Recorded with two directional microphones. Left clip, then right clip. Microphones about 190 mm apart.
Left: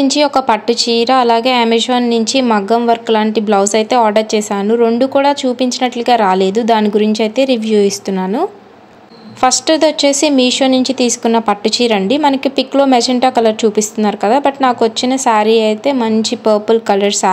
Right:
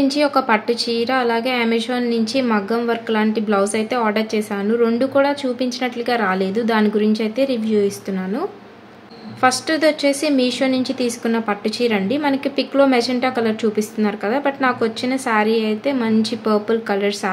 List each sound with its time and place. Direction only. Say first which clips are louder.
0.0 s a woman's voice: left 5 dB; 35° left (ahead or behind)